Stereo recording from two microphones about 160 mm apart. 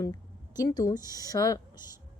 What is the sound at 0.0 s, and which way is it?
A woman's voice, 20° left (ahead or behind).